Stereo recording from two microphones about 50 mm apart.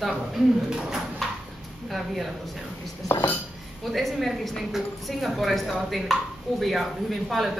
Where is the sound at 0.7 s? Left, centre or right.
Centre.